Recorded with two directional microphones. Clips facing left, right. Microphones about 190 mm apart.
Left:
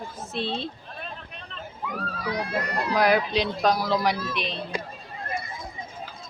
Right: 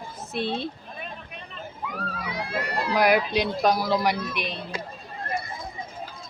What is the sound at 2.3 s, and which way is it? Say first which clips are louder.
Speech: left 2 dB; 25° right (ahead or behind).